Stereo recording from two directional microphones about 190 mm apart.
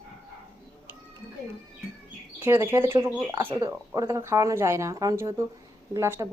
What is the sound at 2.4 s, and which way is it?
Speech, 10° right (ahead or behind).